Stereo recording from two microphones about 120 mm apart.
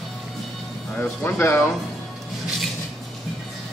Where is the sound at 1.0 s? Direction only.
15° left (ahead or behind).